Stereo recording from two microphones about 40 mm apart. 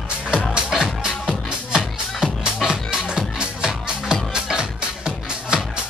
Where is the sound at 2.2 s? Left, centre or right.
Centre.